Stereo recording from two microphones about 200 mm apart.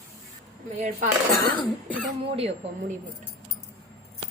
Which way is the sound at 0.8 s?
40° right (ahead or behind).